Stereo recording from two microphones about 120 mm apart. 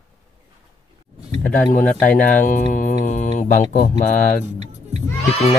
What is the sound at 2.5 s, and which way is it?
Mantra, 90° left.